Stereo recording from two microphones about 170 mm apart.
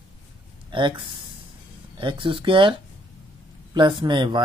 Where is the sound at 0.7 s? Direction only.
30° right (ahead or behind).